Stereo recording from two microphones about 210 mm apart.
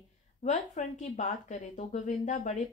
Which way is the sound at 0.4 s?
35° left (ahead or behind).